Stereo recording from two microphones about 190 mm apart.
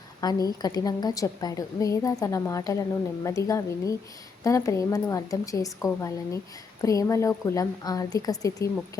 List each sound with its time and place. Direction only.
0.2 s a woman's voice: 20° left (ahead or behind)